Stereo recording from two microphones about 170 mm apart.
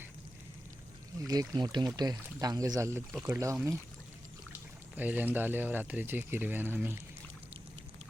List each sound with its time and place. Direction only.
1.2 s speech: 20° right (ahead or behind)
4.9 s speech: 10° right (ahead or behind)